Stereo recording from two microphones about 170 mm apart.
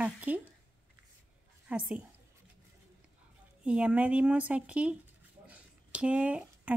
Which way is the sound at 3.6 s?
5° right (ahead or behind).